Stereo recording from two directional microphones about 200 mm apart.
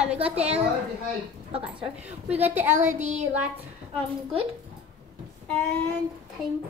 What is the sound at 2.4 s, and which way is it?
Speech, 10° right (ahead or behind).